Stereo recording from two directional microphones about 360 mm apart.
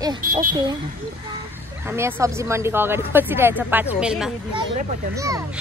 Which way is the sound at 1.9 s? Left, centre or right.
Centre.